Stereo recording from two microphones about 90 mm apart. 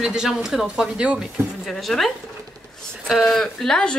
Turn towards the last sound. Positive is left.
turn(degrees=10)  # may be behind; listen again after turning